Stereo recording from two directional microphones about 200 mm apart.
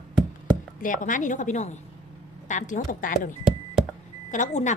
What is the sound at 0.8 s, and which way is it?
A woman's voice, 40° left (ahead or behind).